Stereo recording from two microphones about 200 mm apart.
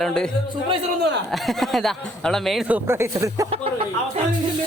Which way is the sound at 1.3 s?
Centre (ahead or behind).